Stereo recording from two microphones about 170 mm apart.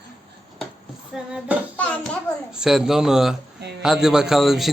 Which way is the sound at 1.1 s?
5° right (ahead or behind).